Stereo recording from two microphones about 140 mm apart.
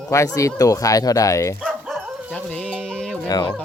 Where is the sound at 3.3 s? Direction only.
30° left (ahead or behind).